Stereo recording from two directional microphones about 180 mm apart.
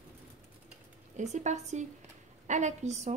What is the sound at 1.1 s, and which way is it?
A woman's voice, 40° right (ahead or behind).